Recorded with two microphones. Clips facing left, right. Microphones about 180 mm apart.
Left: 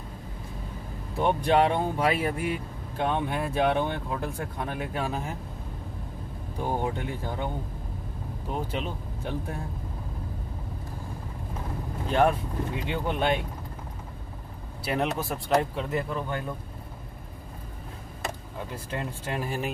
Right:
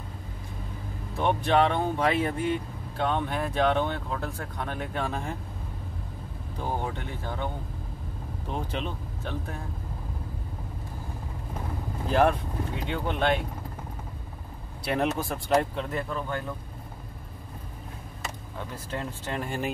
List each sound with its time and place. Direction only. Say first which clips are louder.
1.2 s speech: left 1 dB; 10° left (ahead or behind)
6.6 s speech: left 3 dB; 15° left (ahead or behind)
8.5 s speech: left 1 dB; 5° left (ahead or behind)
12.1 s speech: even; centre (ahead or behind)
14.9 s speech: right 1 dB; centre (ahead or behind)
16.1 s speech: left 1 dB; 20° left (ahead or behind)
18.9 s speech: even; 10° left (ahead or behind)